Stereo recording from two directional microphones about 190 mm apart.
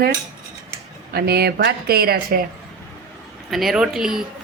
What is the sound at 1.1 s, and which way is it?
Speech, 55° right (ahead or behind).